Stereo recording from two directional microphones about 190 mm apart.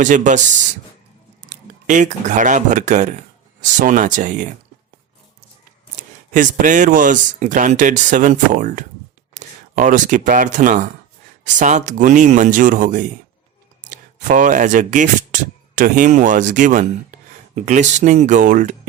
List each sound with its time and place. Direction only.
0.0 s speech: 40° right (ahead or behind)
6.0 s speech: 45° right (ahead or behind)